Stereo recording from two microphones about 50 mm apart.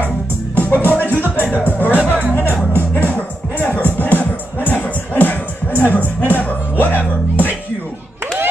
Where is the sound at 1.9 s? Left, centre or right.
Right.